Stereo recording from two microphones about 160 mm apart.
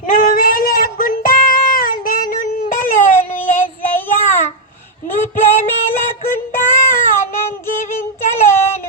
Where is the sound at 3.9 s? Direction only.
15° left (ahead or behind).